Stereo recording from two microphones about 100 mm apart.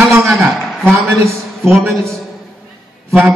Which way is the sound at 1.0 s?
25° right (ahead or behind).